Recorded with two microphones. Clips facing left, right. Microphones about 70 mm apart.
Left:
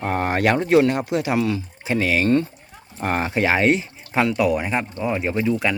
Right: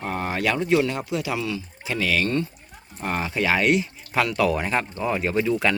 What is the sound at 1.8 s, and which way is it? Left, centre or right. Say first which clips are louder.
Speech: left 5 dB; left.